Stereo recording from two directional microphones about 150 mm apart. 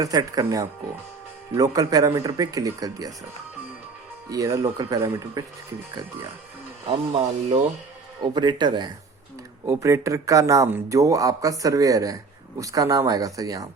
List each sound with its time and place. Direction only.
0.0 s speech: 25° right (ahead or behind)
4.3 s speech: 20° right (ahead or behind)
6.8 s speech: 40° right (ahead or behind)
8.2 s speech: 30° right (ahead or behind)
9.6 s speech: 20° right (ahead or behind)